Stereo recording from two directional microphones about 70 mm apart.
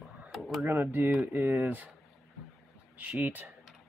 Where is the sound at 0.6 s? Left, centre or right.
Right.